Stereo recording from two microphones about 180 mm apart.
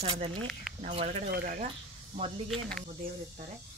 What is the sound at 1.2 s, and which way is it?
Speech, 55° right (ahead or behind).